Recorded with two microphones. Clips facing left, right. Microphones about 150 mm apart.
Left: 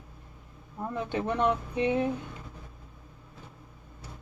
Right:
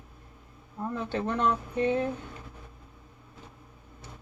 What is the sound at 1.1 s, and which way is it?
Speech, 15° left (ahead or behind).